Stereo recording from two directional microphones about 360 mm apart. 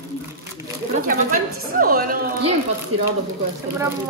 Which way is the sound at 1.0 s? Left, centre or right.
Right.